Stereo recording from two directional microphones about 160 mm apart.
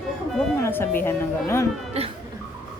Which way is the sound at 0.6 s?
15° left (ahead or behind).